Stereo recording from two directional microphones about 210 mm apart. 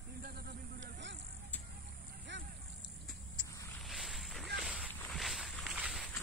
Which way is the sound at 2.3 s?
60° right (ahead or behind).